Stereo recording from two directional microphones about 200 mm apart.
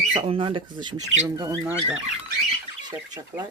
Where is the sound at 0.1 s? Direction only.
25° right (ahead or behind).